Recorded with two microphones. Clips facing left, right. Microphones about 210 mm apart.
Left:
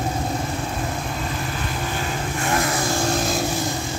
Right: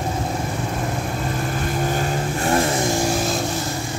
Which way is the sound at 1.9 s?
45° right (ahead or behind).